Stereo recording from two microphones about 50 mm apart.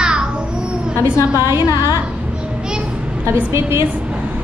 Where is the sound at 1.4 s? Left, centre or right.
Right.